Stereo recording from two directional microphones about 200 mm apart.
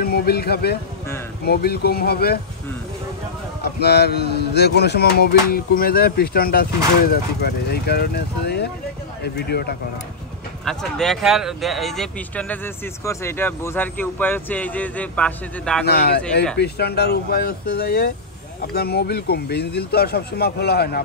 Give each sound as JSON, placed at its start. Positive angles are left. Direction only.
{"t": 0.0, "sound": "a man's voice", "side_deg": 50}
{"t": 3.6, "sound": "speech", "side_deg": 55}
{"t": 10.6, "sound": "speech", "side_deg": 5}
{"t": 15.8, "sound": "speech", "side_deg": 55}